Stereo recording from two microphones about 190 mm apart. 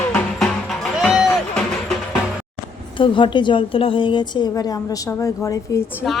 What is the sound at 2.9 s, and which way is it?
A woman's voice, 25° left (ahead or behind).